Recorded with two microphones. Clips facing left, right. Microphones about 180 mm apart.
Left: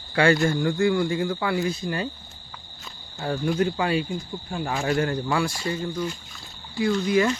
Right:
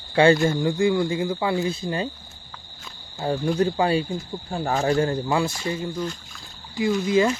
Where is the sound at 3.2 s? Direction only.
25° right (ahead or behind).